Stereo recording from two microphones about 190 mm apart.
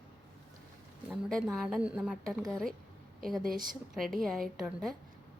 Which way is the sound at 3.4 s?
45° right (ahead or behind).